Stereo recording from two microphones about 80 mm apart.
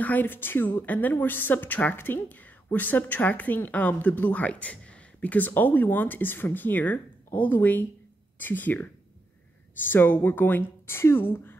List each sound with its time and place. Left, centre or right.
0.0 s a woman's voice: left